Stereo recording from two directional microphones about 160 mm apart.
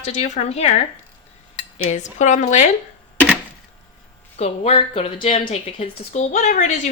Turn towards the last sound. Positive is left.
turn(degrees=50)  # may be behind; listen again after turning